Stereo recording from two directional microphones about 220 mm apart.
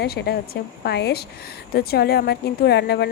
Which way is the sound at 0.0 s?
45° left (ahead or behind).